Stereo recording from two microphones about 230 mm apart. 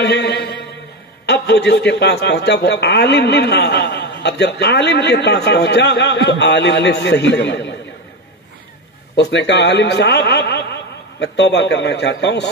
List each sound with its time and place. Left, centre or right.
0.0 s a sound: left
1.2 s a man's voice: left
9.1 s a man's voice: left